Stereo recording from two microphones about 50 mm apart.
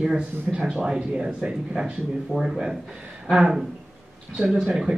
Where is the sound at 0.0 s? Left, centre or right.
Centre.